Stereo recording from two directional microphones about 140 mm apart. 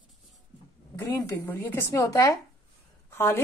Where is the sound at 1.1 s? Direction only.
25° left (ahead or behind).